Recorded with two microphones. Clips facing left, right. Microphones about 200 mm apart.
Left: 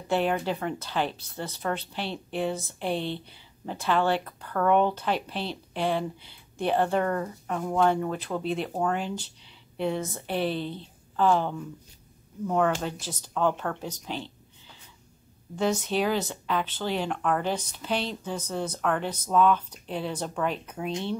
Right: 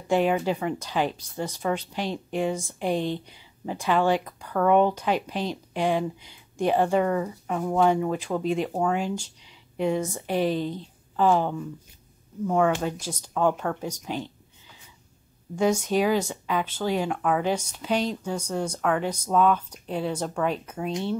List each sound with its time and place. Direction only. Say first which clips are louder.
0.1 s speech: right 3 dB; 10° right (ahead or behind)
15.5 s speech: right 3 dB; 10° right (ahead or behind)